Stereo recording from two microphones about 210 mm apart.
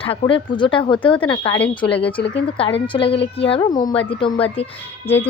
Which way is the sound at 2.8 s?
25° left (ahead or behind).